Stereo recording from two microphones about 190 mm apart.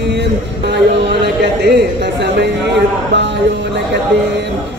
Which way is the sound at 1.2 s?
60° right (ahead or behind).